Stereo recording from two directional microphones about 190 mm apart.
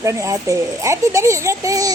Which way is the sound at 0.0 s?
15° right (ahead or behind).